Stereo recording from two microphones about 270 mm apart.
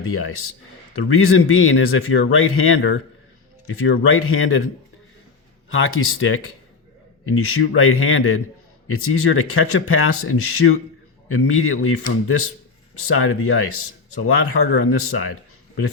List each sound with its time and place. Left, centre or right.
0.0 s speech: left
4.0 s speech: left
5.7 s speech: left